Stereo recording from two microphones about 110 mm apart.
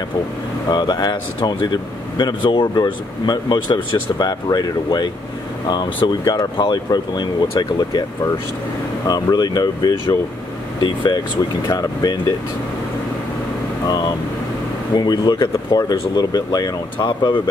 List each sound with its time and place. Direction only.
0.7 s speech: 40° left (ahead or behind)
9.0 s speech: 35° left (ahead or behind)
15.0 s speech: 40° left (ahead or behind)